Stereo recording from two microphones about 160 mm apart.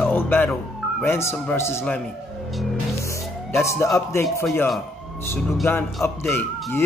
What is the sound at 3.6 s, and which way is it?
Speech, 20° left (ahead or behind).